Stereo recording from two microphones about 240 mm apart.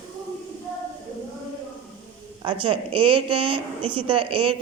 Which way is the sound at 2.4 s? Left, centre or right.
Right.